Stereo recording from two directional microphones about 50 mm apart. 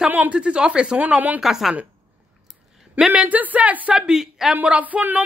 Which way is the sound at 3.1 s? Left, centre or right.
Right.